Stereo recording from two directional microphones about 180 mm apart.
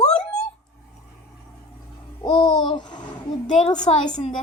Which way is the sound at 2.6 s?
25° left (ahead or behind).